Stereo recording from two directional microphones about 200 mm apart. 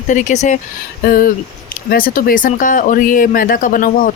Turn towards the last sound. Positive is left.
turn(degrees=45)  # may be behind; listen again after turning